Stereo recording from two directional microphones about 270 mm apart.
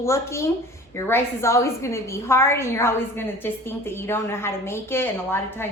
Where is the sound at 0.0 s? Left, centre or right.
Centre.